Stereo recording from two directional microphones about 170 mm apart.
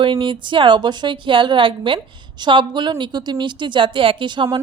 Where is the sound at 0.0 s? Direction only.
30° right (ahead or behind).